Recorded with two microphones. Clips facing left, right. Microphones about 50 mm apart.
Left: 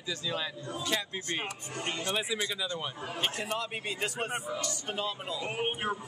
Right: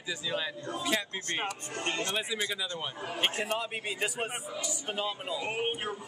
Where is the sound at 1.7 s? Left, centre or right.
Right.